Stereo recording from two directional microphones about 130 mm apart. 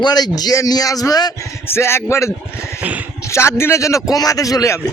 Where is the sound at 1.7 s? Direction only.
20° left (ahead or behind).